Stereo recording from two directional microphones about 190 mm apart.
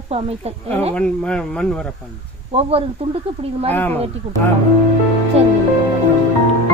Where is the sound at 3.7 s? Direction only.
10° left (ahead or behind).